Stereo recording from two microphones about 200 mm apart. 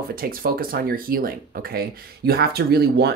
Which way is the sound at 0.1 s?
45° right (ahead or behind).